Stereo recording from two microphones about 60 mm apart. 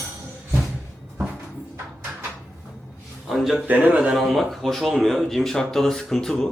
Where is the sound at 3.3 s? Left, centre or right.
Centre.